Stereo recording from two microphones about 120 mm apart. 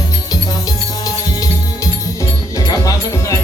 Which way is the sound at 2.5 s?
30° left (ahead or behind).